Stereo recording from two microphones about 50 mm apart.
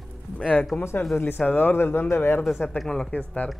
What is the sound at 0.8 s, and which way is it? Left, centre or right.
Speech, left.